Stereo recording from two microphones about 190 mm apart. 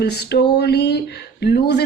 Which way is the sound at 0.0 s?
60° left (ahead or behind).